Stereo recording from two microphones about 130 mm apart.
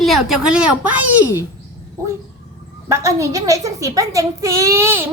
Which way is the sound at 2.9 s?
25° right (ahead or behind).